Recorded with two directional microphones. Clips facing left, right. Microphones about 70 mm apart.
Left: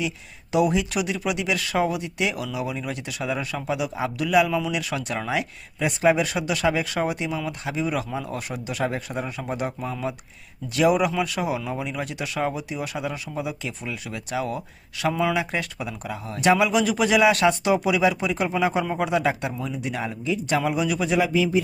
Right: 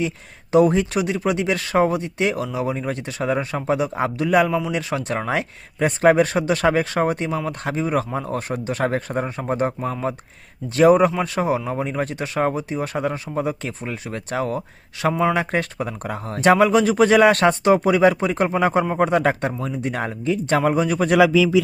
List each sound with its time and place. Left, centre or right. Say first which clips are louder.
0.5 s speech: right 5 dB; right